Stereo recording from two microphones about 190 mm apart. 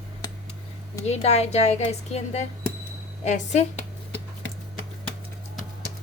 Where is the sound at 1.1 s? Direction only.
35° left (ahead or behind).